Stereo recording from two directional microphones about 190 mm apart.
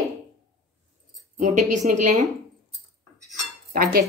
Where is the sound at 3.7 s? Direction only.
50° right (ahead or behind).